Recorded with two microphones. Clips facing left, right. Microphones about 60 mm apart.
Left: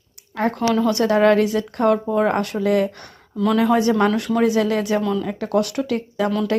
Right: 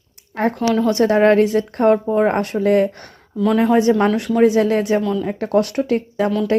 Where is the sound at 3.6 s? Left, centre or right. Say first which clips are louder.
Right 2 dB; right.